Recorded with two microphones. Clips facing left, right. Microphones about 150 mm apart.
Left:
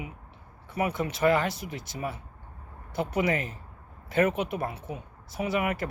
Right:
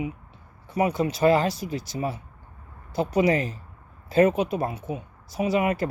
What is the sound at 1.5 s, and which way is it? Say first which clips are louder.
Speech: right 7 dB; 25° left (ahead or behind).